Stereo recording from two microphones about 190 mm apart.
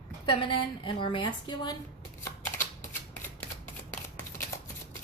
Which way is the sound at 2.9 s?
10° left (ahead or behind).